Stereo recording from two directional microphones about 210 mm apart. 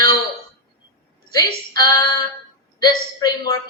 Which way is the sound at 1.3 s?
20° left (ahead or behind).